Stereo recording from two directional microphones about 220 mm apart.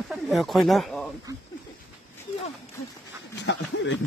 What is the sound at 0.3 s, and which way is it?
Speech, centre (ahead or behind).